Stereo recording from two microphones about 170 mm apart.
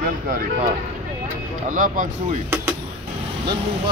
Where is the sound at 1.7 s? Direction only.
55° right (ahead or behind).